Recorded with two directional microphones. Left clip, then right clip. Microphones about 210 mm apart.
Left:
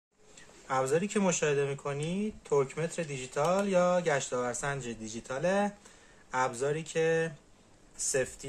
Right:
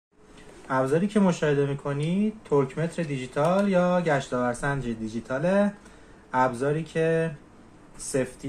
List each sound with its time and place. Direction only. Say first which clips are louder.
0.7 s speech: right 5 dB; 25° left (ahead or behind)